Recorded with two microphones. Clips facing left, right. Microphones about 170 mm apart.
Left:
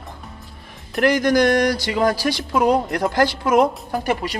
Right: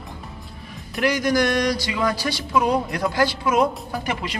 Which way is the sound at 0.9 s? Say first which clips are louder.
Left 4 dB; 50° left (ahead or behind).